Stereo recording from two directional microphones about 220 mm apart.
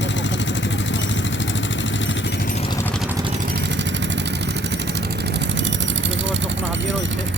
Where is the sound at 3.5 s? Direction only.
55° right (ahead or behind).